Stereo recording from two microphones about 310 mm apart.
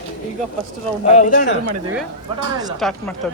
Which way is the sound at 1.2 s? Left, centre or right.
Left.